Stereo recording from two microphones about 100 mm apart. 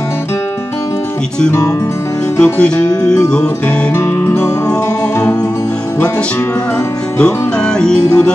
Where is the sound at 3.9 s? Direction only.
25° left (ahead or behind).